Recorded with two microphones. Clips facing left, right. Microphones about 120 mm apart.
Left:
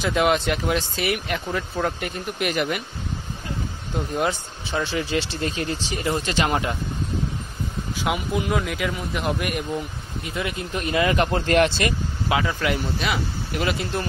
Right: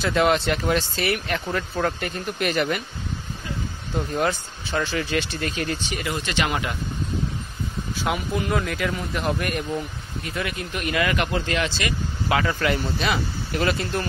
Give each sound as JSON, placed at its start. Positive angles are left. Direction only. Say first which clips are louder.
{"t": 0.0, "sound": "speech", "louder": "even", "side_deg": 10}
{"t": 4.8, "sound": "speech", "louder": "even", "side_deg": 25}
{"t": 7.9, "sound": "speech", "louder": "left 1 dB", "side_deg": 15}
{"t": 10.2, "sound": "speech", "louder": "left 1 dB", "side_deg": 20}
{"t": 11.3, "sound": "speech", "louder": "left 6 dB", "side_deg": 50}
{"t": 12.3, "sound": "speech", "louder": "right 1 dB", "side_deg": 10}